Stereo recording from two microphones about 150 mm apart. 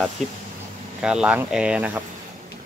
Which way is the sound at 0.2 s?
50° right (ahead or behind).